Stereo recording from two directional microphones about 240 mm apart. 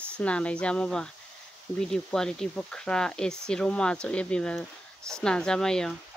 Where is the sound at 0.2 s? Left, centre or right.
Centre.